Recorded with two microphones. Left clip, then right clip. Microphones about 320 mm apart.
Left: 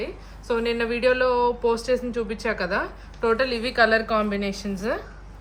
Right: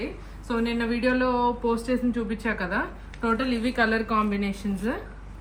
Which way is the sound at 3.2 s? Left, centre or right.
Left.